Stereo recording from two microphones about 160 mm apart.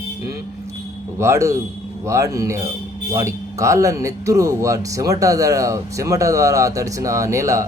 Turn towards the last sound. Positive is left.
turn(degrees=-20)  # may be behind; listen again after turning